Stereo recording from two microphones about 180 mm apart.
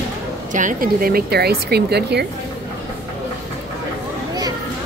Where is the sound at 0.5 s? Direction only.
50° right (ahead or behind); by 2.3 s 65° right (ahead or behind).